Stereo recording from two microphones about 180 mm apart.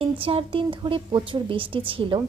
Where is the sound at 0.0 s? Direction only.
30° right (ahead or behind).